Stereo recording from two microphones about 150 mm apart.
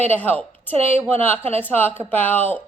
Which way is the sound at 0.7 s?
45° right (ahead or behind).